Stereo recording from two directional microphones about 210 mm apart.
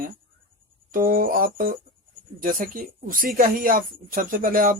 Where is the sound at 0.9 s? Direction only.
40° right (ahead or behind).